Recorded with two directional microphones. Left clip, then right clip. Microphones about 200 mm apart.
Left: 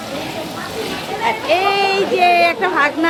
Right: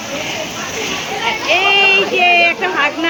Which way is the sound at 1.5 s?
20° left (ahead or behind).